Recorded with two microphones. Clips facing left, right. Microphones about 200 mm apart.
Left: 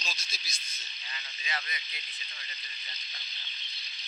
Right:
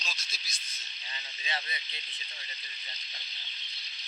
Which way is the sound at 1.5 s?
25° right (ahead or behind).